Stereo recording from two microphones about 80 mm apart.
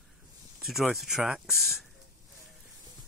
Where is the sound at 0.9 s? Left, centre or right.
Centre.